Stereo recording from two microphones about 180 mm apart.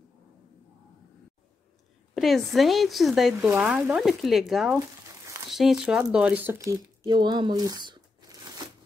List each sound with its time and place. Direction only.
2.1 s speech: centre (ahead or behind)
7.1 s speech: 25° right (ahead or behind)